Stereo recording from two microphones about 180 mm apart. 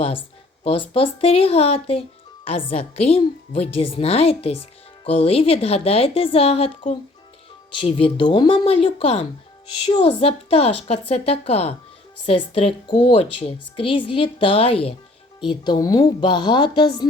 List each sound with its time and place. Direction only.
0.0 s a woman's voice: 30° left (ahead or behind)